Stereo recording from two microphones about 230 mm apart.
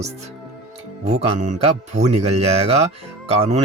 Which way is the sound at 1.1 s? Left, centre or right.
Right.